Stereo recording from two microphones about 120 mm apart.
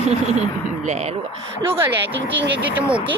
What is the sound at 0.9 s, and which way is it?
Speech, 60° right (ahead or behind).